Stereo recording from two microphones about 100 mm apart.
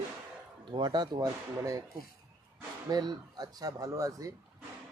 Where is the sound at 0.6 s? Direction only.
50° right (ahead or behind).